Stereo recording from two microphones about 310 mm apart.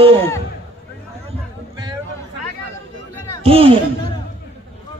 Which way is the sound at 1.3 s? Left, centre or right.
Centre.